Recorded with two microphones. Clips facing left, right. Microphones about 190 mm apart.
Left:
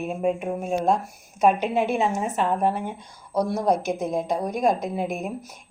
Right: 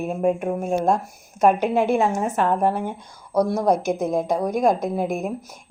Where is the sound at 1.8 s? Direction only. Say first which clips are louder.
Right 4 dB; 50° right (ahead or behind).